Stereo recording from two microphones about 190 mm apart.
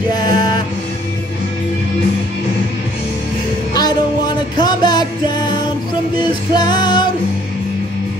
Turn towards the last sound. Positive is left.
turn(degrees=25)  # may be behind; listen again after turning